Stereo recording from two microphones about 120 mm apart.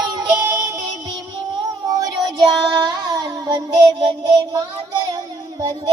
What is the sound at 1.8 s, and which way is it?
Child singing, 30° right (ahead or behind).